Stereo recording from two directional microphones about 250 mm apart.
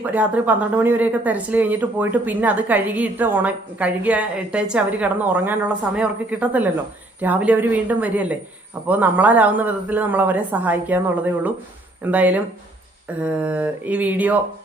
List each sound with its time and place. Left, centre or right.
0.0 s speech: centre